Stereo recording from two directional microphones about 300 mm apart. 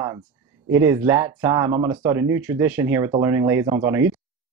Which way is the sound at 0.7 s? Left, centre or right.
Centre.